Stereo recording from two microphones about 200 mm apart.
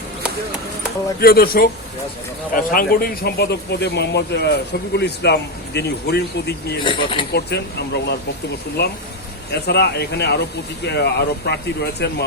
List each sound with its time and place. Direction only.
1.2 s speech: 50° left (ahead or behind)
6.8 s speech: 25° left (ahead or behind)
7.3 s speech: 55° left (ahead or behind)